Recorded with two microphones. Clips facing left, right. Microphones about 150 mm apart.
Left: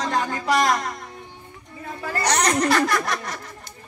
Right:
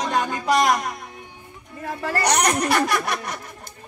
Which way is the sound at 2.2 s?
15° right (ahead or behind).